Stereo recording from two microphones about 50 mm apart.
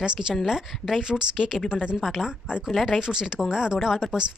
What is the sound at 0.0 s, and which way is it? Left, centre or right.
Speech, centre.